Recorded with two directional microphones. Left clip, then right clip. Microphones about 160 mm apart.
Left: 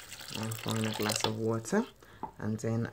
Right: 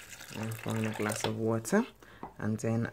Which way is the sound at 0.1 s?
Centre (ahead or behind).